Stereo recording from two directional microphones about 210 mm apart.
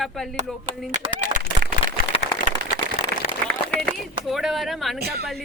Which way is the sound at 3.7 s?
Centre (ahead or behind).